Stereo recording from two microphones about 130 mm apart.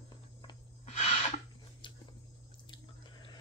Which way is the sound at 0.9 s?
60° left (ahead or behind).